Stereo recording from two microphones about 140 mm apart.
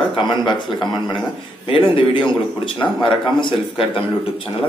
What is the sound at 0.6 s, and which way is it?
Speech, centre (ahead or behind).